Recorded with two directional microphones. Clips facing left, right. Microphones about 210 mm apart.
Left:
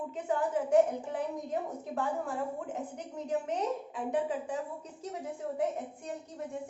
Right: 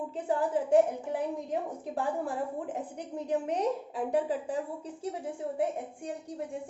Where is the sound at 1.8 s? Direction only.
35° right (ahead or behind).